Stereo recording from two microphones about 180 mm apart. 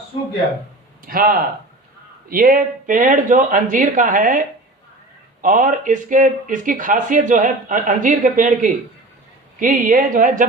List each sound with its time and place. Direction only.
1.0 s speech: 50° right (ahead or behind)